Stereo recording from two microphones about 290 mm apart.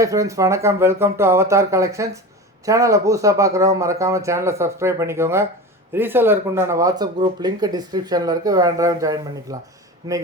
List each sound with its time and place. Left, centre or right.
0.0 s speech: centre